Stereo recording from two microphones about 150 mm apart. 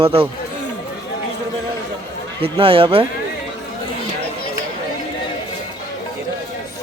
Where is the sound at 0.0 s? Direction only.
35° right (ahead or behind).